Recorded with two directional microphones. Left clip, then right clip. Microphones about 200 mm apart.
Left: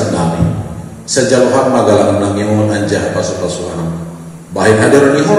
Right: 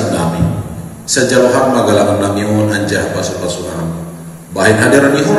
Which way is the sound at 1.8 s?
50° right (ahead or behind).